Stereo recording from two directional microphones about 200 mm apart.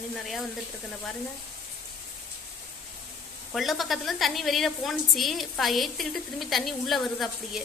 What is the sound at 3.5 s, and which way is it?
A woman's voice, centre (ahead or behind).